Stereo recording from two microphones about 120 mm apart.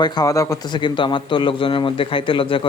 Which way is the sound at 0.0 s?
30° left (ahead or behind).